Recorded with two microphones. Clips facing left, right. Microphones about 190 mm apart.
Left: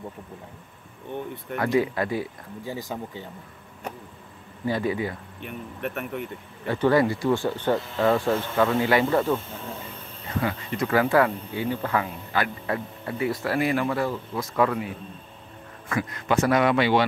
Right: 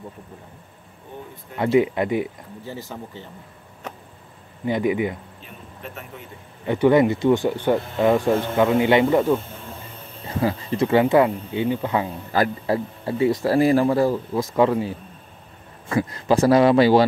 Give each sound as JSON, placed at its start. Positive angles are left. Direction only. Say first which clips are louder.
{"t": 1.6, "sound": "speech", "louder": "right 5 dB", "side_deg": -20}
{"t": 2.6, "sound": "speech", "louder": "left 2 dB", "side_deg": 15}
{"t": 4.6, "sound": "speech", "louder": "right 4 dB", "side_deg": -20}
{"t": 5.4, "sound": "speech", "louder": "left 7 dB", "side_deg": 65}
{"t": 6.6, "sound": "speech", "louder": "right 4 dB", "side_deg": -20}
{"t": 10.2, "sound": "speech", "louder": "right 4 dB", "side_deg": -30}
{"t": 12.3, "sound": "a man's voice", "louder": "right 9 dB", "side_deg": -35}